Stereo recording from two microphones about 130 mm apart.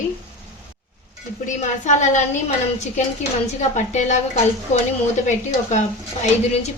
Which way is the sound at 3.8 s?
65° left (ahead or behind).